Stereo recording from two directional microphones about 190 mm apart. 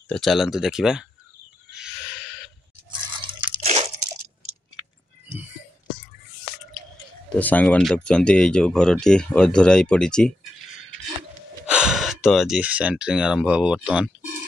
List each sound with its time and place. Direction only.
0.1 s speech: centre (ahead or behind)
1.7 s a sound: 5° right (ahead or behind)
3.3 s crunch: 35° right (ahead or behind)
7.3 s speech: 10° left (ahead or behind)